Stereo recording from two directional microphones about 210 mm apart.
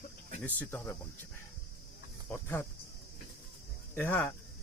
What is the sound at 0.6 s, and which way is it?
Speech, 10° left (ahead or behind).